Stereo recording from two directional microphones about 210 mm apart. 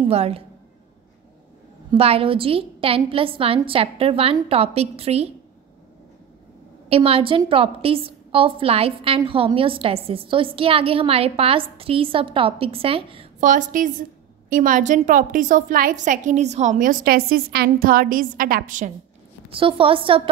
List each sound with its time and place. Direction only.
0.0 s a woman's voice: 30° right (ahead or behind)
1.9 s a woman's voice: 25° right (ahead or behind)
6.9 s a woman's voice: 25° right (ahead or behind)
13.5 s a woman's voice: 40° right (ahead or behind)
19.5 s a woman's voice: 25° right (ahead or behind)